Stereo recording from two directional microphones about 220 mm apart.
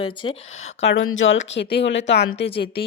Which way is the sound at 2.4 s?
25° left (ahead or behind).